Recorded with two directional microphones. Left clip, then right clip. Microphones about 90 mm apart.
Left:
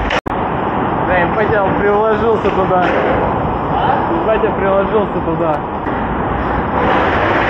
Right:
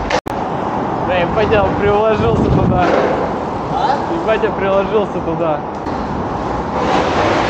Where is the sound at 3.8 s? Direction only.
50° right (ahead or behind).